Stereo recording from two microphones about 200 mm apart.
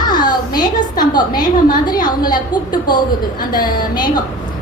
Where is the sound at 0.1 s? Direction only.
20° left (ahead or behind).